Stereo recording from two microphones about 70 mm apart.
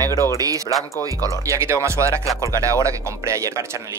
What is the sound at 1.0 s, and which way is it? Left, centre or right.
Speech, right.